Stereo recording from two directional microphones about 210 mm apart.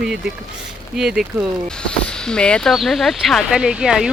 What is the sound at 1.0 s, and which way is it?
Speech, centre (ahead or behind).